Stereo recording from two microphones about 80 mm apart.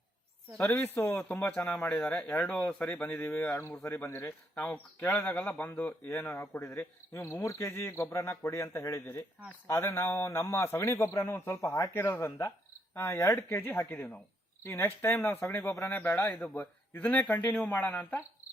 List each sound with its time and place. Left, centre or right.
0.7 s a man's voice: left
6.1 s a man's voice: left